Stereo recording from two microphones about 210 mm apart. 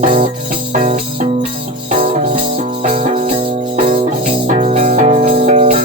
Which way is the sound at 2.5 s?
35° right (ahead or behind).